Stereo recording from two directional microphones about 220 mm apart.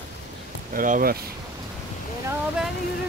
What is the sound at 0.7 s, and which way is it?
Speech, 40° right (ahead or behind).